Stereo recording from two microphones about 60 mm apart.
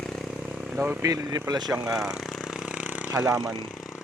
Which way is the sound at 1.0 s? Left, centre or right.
Right.